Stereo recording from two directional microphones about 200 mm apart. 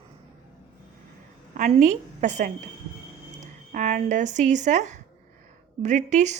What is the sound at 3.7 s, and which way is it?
A woman's voice, 40° right (ahead or behind).